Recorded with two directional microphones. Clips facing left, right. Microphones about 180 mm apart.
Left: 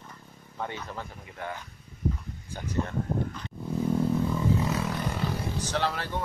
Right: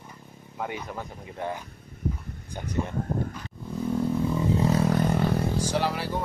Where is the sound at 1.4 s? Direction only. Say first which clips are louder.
Right 5 dB; 25° right (ahead or behind).